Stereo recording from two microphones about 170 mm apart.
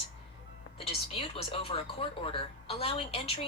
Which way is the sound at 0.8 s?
35° left (ahead or behind).